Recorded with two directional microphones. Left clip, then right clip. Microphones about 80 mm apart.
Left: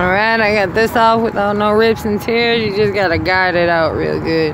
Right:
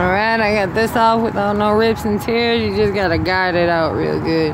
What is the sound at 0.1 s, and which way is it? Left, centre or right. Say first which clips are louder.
Speech: left 3 dB; centre.